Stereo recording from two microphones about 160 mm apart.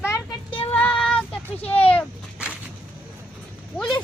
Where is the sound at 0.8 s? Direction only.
5° left (ahead or behind).